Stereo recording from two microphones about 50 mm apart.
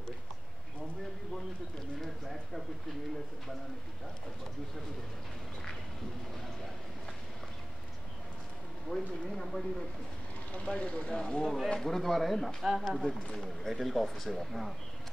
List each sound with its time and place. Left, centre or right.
2.0 s clip-clop: centre
8.8 s speech: centre
10.5 s speech: left; by 14.7 s centre